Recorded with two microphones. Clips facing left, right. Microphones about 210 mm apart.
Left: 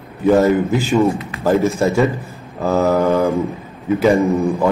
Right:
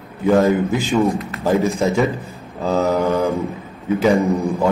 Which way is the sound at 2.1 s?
15° right (ahead or behind).